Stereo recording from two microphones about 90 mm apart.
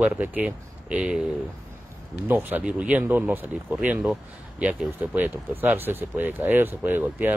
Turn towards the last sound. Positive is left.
turn(degrees=-20)  # may be behind; listen again after turning